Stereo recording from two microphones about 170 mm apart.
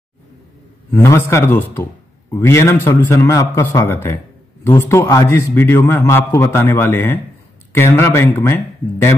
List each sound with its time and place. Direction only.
0.9 s a man's voice: 15° left (ahead or behind)